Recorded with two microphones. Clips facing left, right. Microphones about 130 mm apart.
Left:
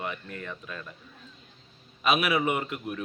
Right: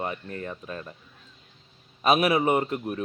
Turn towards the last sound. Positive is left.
turn(degrees=-35)  # may be behind; listen again after turning